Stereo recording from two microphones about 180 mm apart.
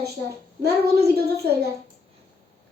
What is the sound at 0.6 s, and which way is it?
Speech, 60° right (ahead or behind).